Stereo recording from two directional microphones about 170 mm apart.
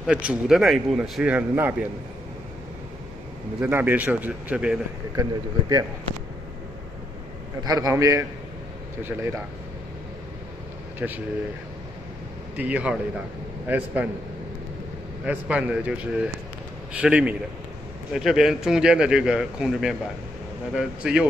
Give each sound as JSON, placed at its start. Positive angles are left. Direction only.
{"t": 0.0, "sound": "a man's voice", "side_deg": -5}
{"t": 3.6, "sound": "a man's voice", "side_deg": -10}
{"t": 5.1, "sound": "speech", "side_deg": -20}
{"t": 7.6, "sound": "a man's voice", "side_deg": -20}
{"t": 11.0, "sound": "a man's voice", "side_deg": -5}
{"t": 12.5, "sound": "a man's voice", "side_deg": -10}
{"t": 15.2, "sound": "a man's voice", "side_deg": -10}